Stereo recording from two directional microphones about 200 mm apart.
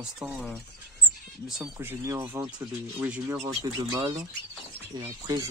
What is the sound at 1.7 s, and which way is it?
Speech, 15° right (ahead or behind).